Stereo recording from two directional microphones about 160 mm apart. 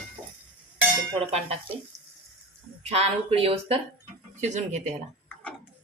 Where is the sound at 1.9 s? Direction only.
20° right (ahead or behind).